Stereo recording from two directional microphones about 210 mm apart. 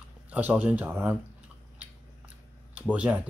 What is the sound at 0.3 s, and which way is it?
Speech, 5° right (ahead or behind).